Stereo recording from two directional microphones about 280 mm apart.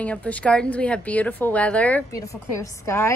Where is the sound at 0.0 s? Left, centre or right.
Centre.